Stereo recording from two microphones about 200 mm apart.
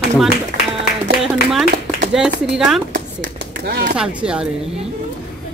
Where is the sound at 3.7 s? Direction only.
60° right (ahead or behind).